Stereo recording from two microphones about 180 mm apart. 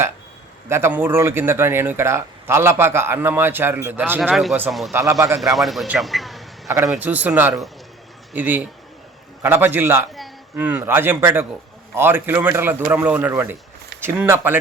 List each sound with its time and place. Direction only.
0.7 s a man's voice: 15° right (ahead or behind)
4.9 s speech: 15° right (ahead or behind)
5.5 s a man's voice: centre (ahead or behind)
6.7 s speech: 15° right (ahead or behind)